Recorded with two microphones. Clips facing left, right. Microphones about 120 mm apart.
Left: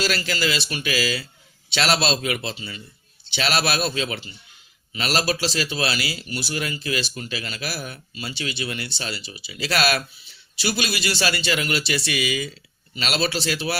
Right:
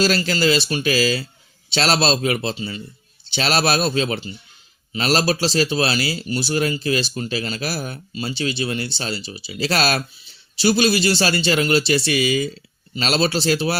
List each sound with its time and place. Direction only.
0.0 s a man's voice: 35° right (ahead or behind)